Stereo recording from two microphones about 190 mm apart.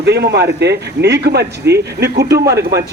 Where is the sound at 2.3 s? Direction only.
15° right (ahead or behind).